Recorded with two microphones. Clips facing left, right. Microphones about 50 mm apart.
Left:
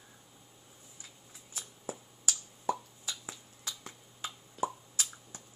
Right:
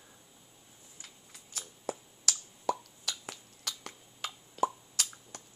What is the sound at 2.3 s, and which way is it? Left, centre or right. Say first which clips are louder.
Plop: right 1 dB; right.